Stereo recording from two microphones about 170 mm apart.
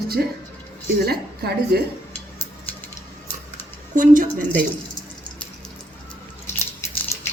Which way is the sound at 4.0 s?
50° right (ahead or behind).